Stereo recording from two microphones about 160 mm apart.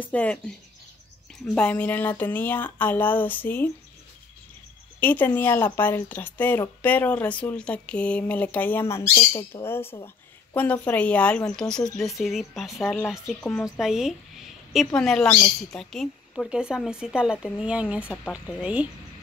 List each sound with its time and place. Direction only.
0.0 s speech: 10° left (ahead or behind)
1.5 s speech: 10° left (ahead or behind)
5.0 s a woman's voice: 10° left (ahead or behind)
13.7 s a woman's voice: 5° right (ahead or behind)